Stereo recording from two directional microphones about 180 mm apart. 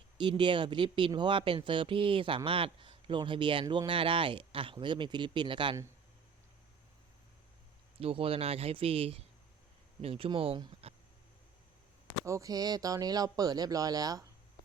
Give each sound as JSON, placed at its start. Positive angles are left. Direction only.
{"t": 0.2, "sound": "speech", "side_deg": -25}
{"t": 7.9, "sound": "speech", "side_deg": -30}
{"t": 12.2, "sound": "speech", "side_deg": -15}